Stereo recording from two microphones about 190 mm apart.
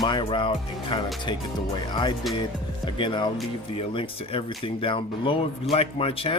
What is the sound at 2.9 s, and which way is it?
Speech, 25° left (ahead or behind).